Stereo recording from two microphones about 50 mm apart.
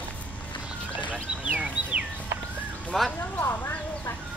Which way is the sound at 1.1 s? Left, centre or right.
Right.